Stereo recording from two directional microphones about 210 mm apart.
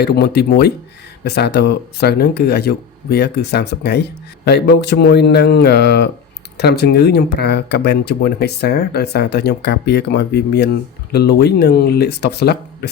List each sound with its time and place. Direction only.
0.0 s speech: 50° left (ahead or behind)